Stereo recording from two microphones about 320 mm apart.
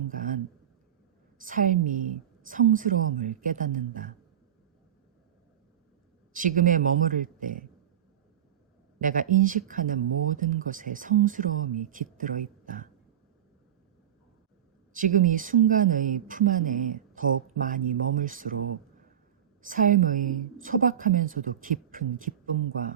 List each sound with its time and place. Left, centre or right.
0.1 s a sound: right
1.4 s speech: right
6.3 s speech: right
9.0 s speech: right
14.9 s speech: right
19.6 s speech: right